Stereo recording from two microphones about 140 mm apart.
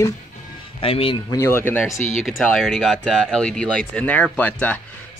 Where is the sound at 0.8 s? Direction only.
40° left (ahead or behind).